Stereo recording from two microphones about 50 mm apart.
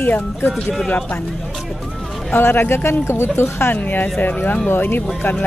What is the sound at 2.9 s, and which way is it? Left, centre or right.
Speech, left.